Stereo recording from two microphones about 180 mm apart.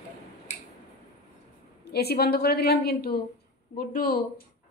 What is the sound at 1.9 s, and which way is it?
A woman's voice, 60° left (ahead or behind).